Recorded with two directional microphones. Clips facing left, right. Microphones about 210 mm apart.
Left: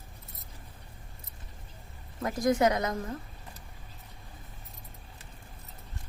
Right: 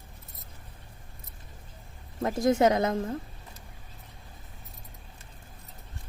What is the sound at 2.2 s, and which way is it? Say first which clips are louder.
Speech: right 3 dB; 25° right (ahead or behind).